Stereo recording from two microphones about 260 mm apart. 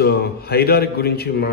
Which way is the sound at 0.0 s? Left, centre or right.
Left.